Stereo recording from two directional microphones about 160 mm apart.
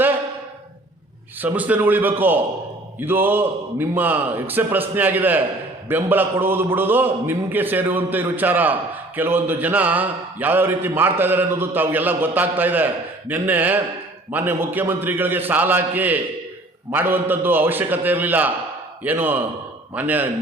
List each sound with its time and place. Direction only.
1.4 s a man's voice: 10° right (ahead or behind)